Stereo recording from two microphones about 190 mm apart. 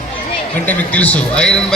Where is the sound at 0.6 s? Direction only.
10° left (ahead or behind).